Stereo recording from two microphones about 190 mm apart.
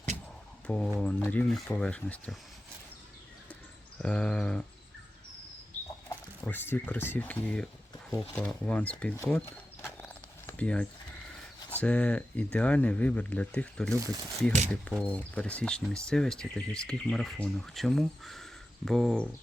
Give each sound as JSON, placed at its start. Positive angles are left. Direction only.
{"t": 0.7, "sound": "speech", "side_deg": 5}
{"t": 3.5, "sound": "a sound", "side_deg": 5}
{"t": 6.4, "sound": "speech", "side_deg": 10}
{"t": 10.0, "sound": "a sound", "side_deg": 10}
{"t": 11.7, "sound": "speech", "side_deg": 5}
{"t": 14.0, "sound": "speech", "side_deg": -15}
{"t": 14.7, "sound": "speech", "side_deg": 5}